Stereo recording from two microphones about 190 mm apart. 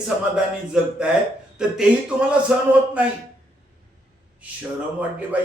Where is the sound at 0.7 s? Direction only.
5° right (ahead or behind).